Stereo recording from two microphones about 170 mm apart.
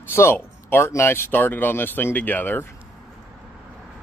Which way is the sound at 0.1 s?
15° left (ahead or behind).